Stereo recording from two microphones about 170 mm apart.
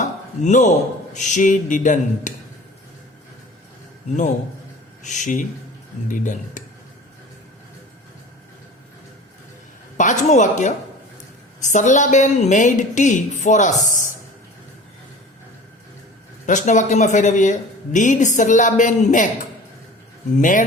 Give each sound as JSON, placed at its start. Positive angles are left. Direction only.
{"t": 0.4, "sound": "speech", "side_deg": 45}
{"t": 5.0, "sound": "speech", "side_deg": 45}
{"t": 10.0, "sound": "speech", "side_deg": 45}
{"t": 16.5, "sound": "speech", "side_deg": 45}
{"t": 20.3, "sound": "speech", "side_deg": 50}